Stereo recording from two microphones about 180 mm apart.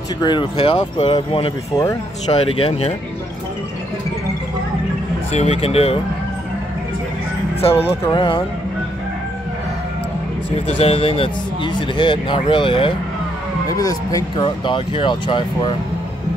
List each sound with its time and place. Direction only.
0.2 s speech: 25° left (ahead or behind)
5.3 s speech: 35° left (ahead or behind)
8.0 s speech: 25° left (ahead or behind)
10.8 s speech: 35° left (ahead or behind)